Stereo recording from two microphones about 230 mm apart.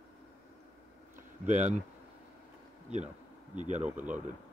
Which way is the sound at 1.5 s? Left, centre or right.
Right.